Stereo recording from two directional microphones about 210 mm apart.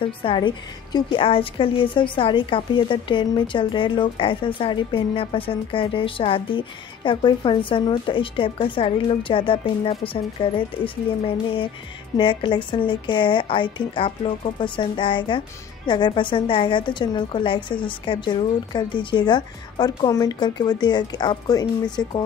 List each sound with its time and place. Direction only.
0.0 s a woman's voice: 25° left (ahead or behind)